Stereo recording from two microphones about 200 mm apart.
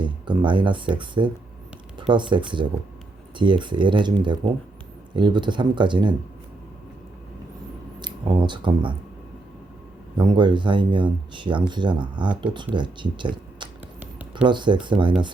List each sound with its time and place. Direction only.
0.0 s speech: 25° right (ahead or behind)
7.9 s speech: 20° right (ahead or behind)
10.2 s speech: 20° right (ahead or behind)
14.0 s a sound: 5° right (ahead or behind)
14.4 s speech: 25° right (ahead or behind)